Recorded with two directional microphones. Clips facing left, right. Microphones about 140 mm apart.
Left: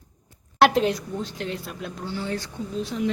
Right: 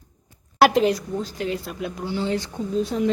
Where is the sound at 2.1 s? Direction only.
20° right (ahead or behind).